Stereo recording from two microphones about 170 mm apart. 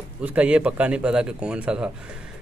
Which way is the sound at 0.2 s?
10° right (ahead or behind).